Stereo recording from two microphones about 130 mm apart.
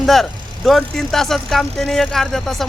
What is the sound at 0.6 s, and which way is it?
Speech, centre (ahead or behind).